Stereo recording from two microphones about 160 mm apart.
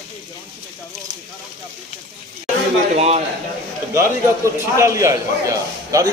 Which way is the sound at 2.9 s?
40° right (ahead or behind).